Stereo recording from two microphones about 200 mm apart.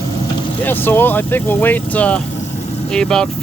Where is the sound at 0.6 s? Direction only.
10° left (ahead or behind).